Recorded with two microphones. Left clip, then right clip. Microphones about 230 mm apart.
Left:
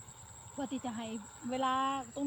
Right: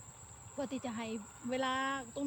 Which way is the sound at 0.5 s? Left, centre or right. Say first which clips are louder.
Even; right.